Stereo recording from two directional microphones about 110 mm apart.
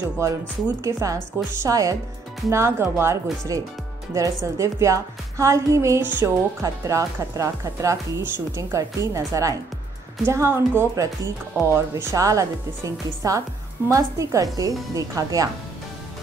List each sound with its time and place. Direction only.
0.2 s speech: 25° right (ahead or behind)